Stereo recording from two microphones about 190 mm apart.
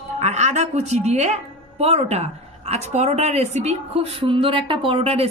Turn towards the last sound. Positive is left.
turn(degrees=-30)  # may be behind; listen again after turning